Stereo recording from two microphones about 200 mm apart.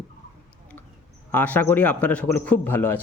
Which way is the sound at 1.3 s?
10° left (ahead or behind).